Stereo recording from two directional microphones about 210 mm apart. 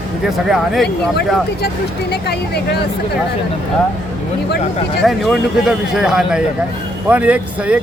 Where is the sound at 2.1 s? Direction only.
50° left (ahead or behind).